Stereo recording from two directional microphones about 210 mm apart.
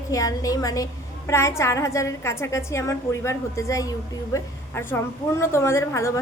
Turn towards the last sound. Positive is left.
turn(degrees=15)  # may be behind; listen again after turning